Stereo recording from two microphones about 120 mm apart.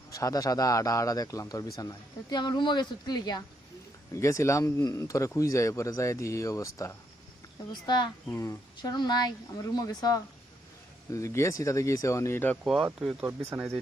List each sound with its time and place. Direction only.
0.1 s a man's voice: 30° left (ahead or behind)
7.7 s a man's voice: 40° left (ahead or behind); by 12.5 s 20° left (ahead or behind)
13.5 s speech: 15° right (ahead or behind)